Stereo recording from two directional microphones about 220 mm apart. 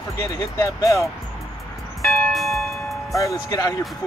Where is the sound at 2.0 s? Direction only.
Centre (ahead or behind).